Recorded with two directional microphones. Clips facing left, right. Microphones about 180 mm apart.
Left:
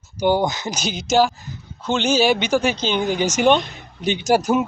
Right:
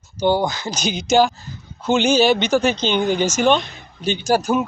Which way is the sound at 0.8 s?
Centre (ahead or behind).